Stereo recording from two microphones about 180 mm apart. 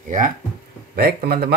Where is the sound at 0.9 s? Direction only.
60° right (ahead or behind).